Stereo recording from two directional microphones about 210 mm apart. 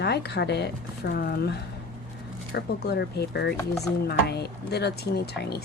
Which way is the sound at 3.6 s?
15° left (ahead or behind).